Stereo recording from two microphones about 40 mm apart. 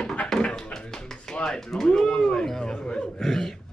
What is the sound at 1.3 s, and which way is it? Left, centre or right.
Speech, centre.